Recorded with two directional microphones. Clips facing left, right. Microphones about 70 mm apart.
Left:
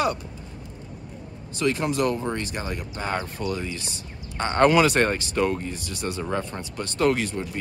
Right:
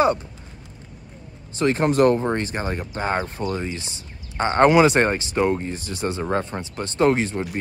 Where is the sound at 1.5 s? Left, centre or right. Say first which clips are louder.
Right 4 dB; right.